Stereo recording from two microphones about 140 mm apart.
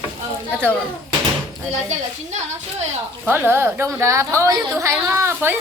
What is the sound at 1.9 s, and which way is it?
Speech, 55° right (ahead or behind).